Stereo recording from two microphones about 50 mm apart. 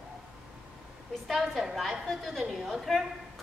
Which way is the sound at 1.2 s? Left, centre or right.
Centre.